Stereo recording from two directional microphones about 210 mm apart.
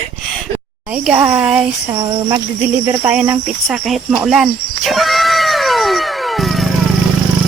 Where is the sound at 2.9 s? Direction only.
5° right (ahead or behind).